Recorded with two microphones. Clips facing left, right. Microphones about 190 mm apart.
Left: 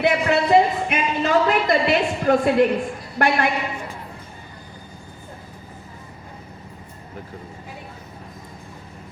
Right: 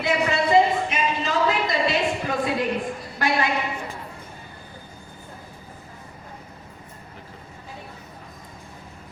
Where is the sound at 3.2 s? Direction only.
60° left (ahead or behind).